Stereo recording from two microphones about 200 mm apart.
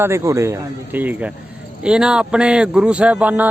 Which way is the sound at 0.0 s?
15° right (ahead or behind).